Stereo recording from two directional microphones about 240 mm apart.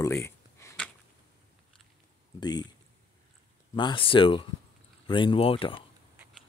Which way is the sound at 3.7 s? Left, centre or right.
Left.